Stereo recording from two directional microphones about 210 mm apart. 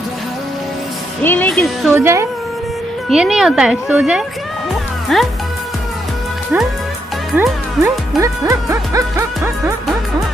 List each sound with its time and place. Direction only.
1.2 s speech: 10° left (ahead or behind)
1.9 s a woman's voice: 10° right (ahead or behind)
7.3 s a woman's voice: 5° right (ahead or behind)
8.2 s speech: 15° right (ahead or behind)